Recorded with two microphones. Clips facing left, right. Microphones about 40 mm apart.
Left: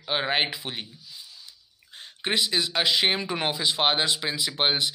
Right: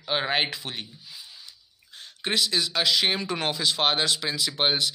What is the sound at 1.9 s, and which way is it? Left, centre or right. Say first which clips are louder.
Speech: even; left.